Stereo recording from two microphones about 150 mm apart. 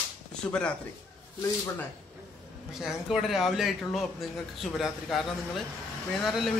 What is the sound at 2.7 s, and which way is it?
A man's voice, 5° right (ahead or behind).